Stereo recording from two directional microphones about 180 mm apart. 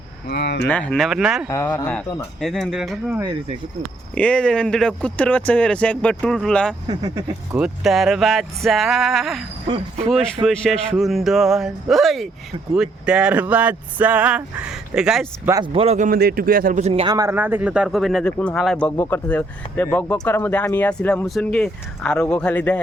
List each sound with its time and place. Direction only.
0.3 s speech: 65° left (ahead or behind)
0.7 s speech: 5° left (ahead or behind)
1.5 s speech: 15° left (ahead or behind); by 15.3 s 5° right (ahead or behind)
15.4 s a man's voice: 25° right (ahead or behind)
16.0 s a man's voice: 55° right (ahead or behind); by 17.2 s 30° right (ahead or behind)
17.2 s speech: 15° right (ahead or behind); by 22.8 s 5° left (ahead or behind)